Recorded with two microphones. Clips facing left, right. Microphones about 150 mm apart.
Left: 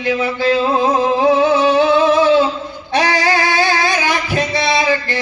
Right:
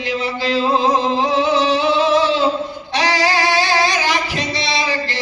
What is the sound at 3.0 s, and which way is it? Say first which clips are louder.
Singing: left 2 dB; 50° left (ahead or behind).